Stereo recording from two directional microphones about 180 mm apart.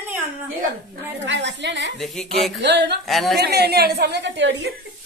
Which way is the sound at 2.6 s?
75° right (ahead or behind).